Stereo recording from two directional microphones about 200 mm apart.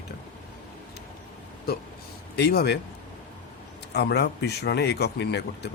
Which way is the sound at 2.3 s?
55° left (ahead or behind).